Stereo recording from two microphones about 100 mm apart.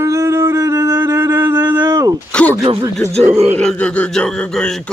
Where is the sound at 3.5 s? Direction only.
10° left (ahead or behind).